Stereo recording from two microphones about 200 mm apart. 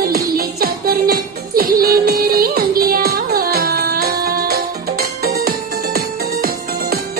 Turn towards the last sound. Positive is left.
turn(degrees=-50)  # may be behind; listen again after turning